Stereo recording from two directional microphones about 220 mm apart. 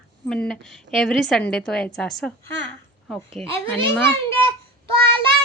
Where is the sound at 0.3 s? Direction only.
Centre (ahead or behind).